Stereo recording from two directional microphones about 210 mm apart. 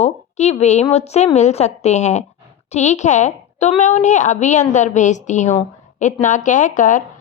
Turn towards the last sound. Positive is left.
turn(degrees=40)  # may be behind; listen again after turning